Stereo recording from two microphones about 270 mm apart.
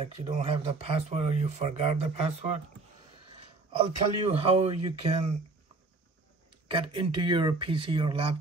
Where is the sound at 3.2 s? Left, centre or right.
Centre.